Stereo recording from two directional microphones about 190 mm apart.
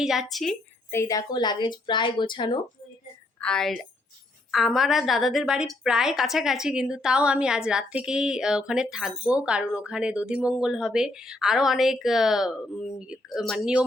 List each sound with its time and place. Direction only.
0.0 s a woman's voice: centre (ahead or behind)
0.9 s speech: 15° left (ahead or behind)
3.4 s a woman's voice: 5° left (ahead or behind)